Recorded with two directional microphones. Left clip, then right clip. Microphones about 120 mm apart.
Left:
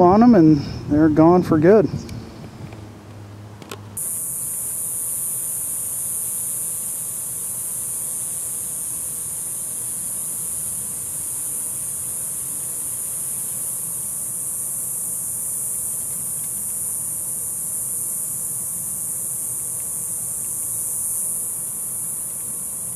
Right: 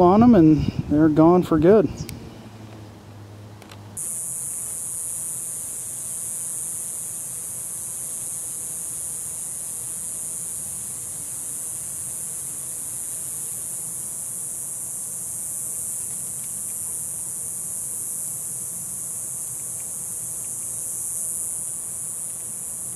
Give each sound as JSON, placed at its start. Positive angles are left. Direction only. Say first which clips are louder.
{"t": 0.0, "sound": "speech", "louder": "left 2 dB", "side_deg": -20}